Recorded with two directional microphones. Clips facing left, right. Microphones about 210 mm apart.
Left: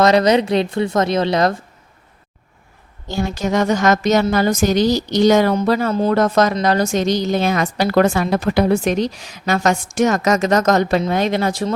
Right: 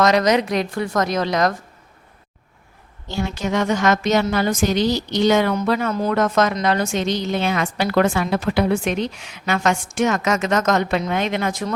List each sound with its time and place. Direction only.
0.0 s a woman's voice: 30° left (ahead or behind)
3.1 s a woman's voice: 40° left (ahead or behind)